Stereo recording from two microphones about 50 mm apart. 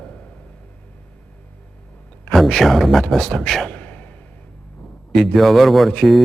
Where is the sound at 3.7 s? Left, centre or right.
Left.